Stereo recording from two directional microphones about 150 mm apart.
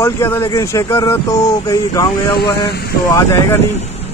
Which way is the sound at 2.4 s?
25° left (ahead or behind).